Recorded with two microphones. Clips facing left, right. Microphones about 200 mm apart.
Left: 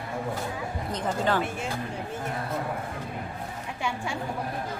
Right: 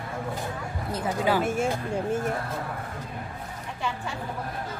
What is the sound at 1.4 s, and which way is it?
Speech, 45° right (ahead or behind).